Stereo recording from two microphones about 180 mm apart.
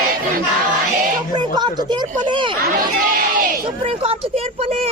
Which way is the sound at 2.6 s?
55° right (ahead or behind).